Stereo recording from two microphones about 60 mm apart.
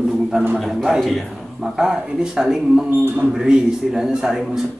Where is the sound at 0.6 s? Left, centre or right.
Centre.